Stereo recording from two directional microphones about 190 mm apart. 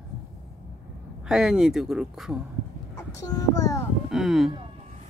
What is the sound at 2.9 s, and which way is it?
Speech, 20° left (ahead or behind).